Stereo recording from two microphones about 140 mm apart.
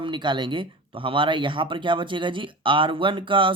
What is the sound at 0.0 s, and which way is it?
Speech, 35° right (ahead or behind).